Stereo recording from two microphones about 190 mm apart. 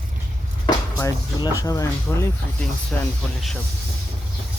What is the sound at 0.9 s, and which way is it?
Speech, 15° left (ahead or behind).